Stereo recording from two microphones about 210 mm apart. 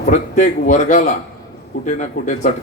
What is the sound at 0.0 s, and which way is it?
A man's voice, 35° left (ahead or behind).